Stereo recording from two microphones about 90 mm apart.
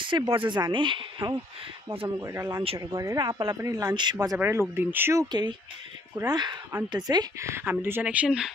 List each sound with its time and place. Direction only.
0.3 s speech: 65° right (ahead or behind)
2.0 s speech: 40° right (ahead or behind)
2.8 s speech: 45° right (ahead or behind)
3.9 s speech: 55° right (ahead or behind)
4.4 s speech: 25° right (ahead or behind)
5.3 s speech: 50° right (ahead or behind)
7.3 s speech: 30° right (ahead or behind)
8.0 s speech: 15° right (ahead or behind)